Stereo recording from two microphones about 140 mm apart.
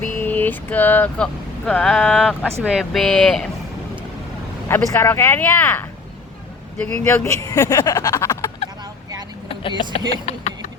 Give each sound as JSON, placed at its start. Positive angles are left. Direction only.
{"t": 0.2, "sound": "speech", "side_deg": 15}
{"t": 4.7, "sound": "speech", "side_deg": 15}
{"t": 6.8, "sound": "speech", "side_deg": 20}
{"t": 9.5, "sound": "vehicle", "side_deg": 40}
{"t": 10.3, "sound": "speech", "side_deg": 55}